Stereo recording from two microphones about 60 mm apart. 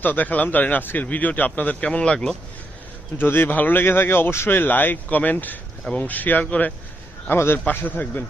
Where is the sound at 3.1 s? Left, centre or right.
Left.